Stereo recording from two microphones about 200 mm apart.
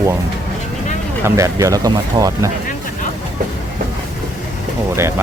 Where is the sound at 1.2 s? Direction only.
15° right (ahead or behind).